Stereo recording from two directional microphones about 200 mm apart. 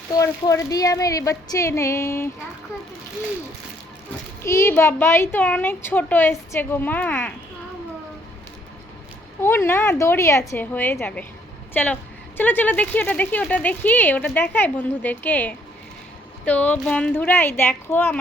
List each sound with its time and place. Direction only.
0.1 s speech: 15° left (ahead or behind)
4.4 s speech: 15° left (ahead or behind)
9.4 s speech: 10° left (ahead or behind)